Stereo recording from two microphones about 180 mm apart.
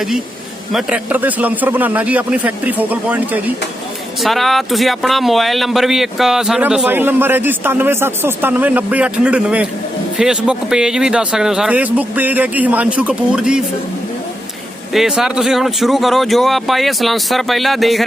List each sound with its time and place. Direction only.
0.7 s speech: 5° right (ahead or behind)
14.9 s speech: centre (ahead or behind)